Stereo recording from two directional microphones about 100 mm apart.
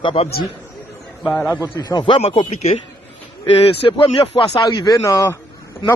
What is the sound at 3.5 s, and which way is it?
Speech, 65° left (ahead or behind).